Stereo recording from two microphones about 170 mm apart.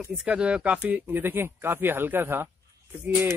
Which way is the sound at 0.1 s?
5° right (ahead or behind).